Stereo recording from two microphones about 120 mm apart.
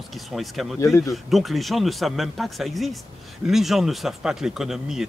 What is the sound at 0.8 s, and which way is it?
Speech, 25° left (ahead or behind).